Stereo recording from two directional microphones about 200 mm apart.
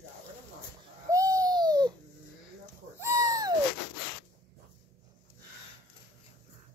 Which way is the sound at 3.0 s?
15° right (ahead or behind).